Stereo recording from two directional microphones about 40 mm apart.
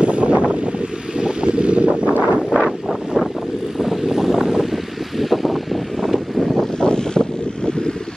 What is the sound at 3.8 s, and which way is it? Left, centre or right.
Vehicle, centre.